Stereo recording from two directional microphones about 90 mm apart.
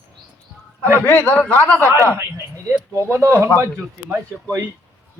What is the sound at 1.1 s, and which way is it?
Speech, 20° left (ahead or behind).